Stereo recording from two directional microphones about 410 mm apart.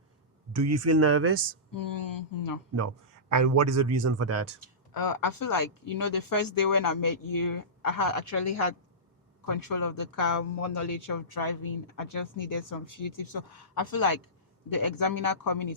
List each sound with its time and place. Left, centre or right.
0.5 s a man's voice: right
1.7 s speech: left
2.7 s a man's voice: right
4.9 s speech: left
9.5 s speech: left